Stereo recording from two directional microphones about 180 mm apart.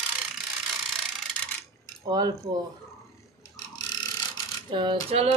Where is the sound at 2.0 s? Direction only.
20° right (ahead or behind).